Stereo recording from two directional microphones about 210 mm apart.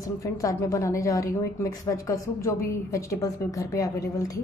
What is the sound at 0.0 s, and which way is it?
A woman's voice, 15° left (ahead or behind).